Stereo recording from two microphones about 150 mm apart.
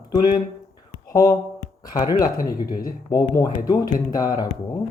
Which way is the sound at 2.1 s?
75° left (ahead or behind).